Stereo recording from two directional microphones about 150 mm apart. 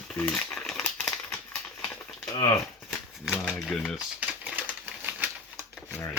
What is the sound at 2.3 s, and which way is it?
Speech, 25° left (ahead or behind).